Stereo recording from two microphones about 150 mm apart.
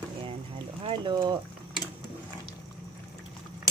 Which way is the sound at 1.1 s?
30° right (ahead or behind).